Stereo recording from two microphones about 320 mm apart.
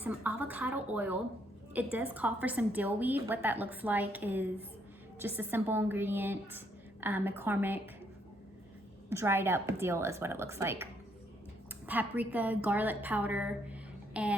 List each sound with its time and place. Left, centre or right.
0.0 s a woman's voice: centre
9.0 s a woman's voice: centre
11.9 s a woman's voice: centre